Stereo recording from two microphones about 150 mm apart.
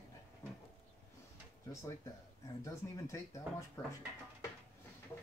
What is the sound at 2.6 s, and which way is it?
Speech, 20° left (ahead or behind).